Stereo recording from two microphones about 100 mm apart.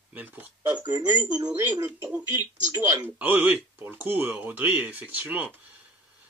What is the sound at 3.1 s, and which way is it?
Speech, 20° right (ahead or behind).